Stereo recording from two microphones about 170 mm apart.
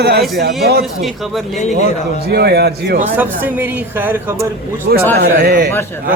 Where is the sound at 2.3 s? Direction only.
70° right (ahead or behind).